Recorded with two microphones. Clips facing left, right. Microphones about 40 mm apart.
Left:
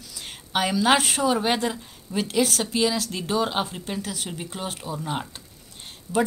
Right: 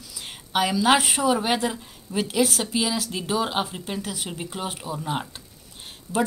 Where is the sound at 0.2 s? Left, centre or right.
Centre.